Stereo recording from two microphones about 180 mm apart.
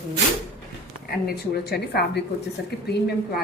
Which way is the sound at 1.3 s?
65° left (ahead or behind).